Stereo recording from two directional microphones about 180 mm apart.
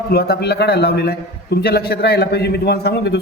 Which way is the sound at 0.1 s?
60° left (ahead or behind).